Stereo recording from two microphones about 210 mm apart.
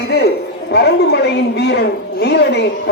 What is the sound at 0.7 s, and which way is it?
A woman's voice, 50° left (ahead or behind).